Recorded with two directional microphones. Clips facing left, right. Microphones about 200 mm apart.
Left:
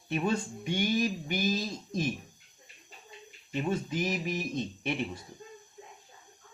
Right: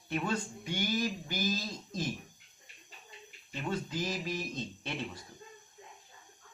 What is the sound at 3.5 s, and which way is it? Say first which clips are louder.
Speech: left 5 dB; 20° left (ahead or behind).